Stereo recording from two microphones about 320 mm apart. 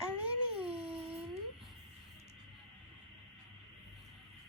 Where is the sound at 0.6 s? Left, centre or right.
Centre.